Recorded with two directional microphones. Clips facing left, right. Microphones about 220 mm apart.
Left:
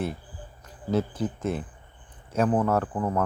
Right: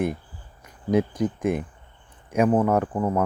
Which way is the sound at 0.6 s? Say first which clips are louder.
Right 4 dB; 15° right (ahead or behind).